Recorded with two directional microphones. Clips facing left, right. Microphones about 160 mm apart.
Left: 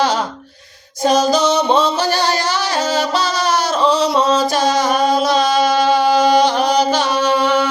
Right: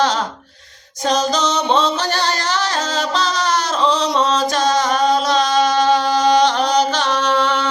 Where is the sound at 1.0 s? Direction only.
10° left (ahead or behind).